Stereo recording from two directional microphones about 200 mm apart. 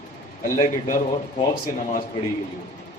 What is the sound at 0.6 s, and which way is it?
Speech, 40° left (ahead or behind).